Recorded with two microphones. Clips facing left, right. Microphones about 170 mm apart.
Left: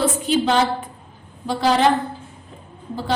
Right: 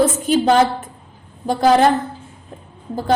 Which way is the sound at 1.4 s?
50° right (ahead or behind).